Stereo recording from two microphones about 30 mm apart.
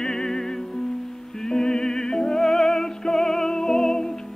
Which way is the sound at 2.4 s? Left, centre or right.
Centre.